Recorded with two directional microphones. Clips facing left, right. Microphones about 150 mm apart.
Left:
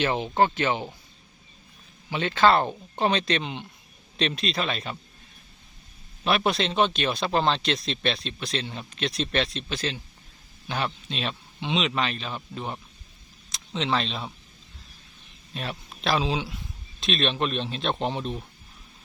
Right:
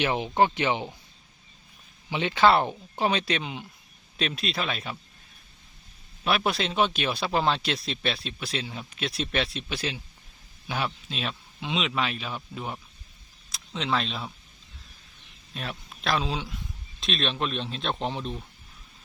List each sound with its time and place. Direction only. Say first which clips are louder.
0.0 s speech: left 1 dB; 15° right (ahead or behind)
2.0 s a man's voice: even; 15° right (ahead or behind)
6.2 s a man's voice: left 2 dB; centre (ahead or behind)
15.5 s a man's voice: left 2 dB; centre (ahead or behind)